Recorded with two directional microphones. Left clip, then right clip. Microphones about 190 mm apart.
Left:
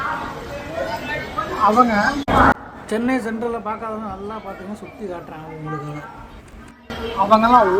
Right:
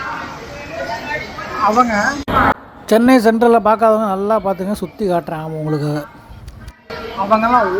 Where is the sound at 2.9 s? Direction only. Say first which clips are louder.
Right 11 dB; 40° right (ahead or behind).